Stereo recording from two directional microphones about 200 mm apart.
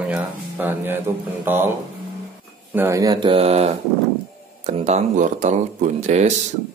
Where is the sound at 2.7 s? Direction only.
15° right (ahead or behind); by 6.3 s 35° right (ahead or behind).